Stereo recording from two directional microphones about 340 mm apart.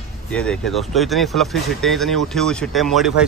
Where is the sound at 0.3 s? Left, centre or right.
Centre.